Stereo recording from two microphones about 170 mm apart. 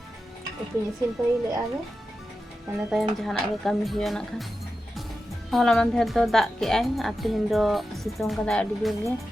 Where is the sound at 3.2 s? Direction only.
Centre (ahead or behind).